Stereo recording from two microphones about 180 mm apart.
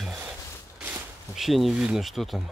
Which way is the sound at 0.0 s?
5° right (ahead or behind).